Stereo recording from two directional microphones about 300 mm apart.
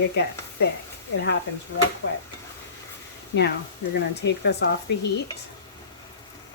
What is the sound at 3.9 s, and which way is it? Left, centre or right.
Speech, left.